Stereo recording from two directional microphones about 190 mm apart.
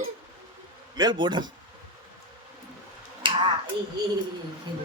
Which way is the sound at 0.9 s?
20° right (ahead or behind).